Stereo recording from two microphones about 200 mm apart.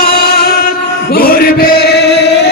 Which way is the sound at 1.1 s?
50° left (ahead or behind).